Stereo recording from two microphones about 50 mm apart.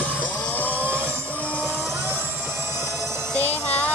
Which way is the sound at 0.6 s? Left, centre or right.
Left.